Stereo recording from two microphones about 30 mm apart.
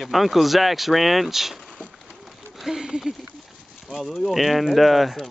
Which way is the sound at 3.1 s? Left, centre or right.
Right.